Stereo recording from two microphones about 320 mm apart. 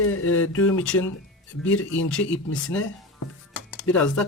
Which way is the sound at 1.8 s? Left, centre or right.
Left.